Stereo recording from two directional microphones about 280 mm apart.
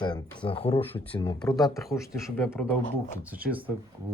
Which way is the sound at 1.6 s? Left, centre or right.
Centre.